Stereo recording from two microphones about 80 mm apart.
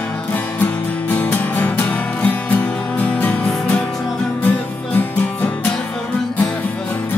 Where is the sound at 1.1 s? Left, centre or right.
Left.